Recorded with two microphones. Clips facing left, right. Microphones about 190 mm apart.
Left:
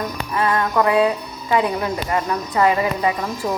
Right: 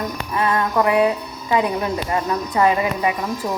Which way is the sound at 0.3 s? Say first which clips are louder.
Even; 20° right (ahead or behind).